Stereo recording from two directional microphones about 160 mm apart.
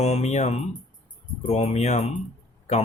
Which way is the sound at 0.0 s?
45° left (ahead or behind).